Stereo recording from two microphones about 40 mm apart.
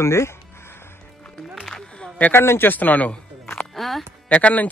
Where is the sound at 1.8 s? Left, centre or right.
Left.